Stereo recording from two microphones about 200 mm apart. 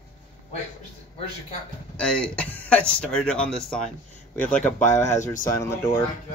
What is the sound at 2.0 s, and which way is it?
Speech, 5° left (ahead or behind).